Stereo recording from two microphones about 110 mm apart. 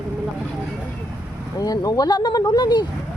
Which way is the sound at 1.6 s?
35° left (ahead or behind).